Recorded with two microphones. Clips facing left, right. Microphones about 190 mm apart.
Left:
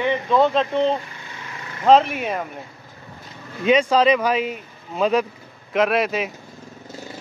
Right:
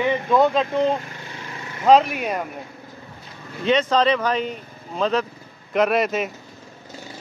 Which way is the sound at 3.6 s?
10° left (ahead or behind).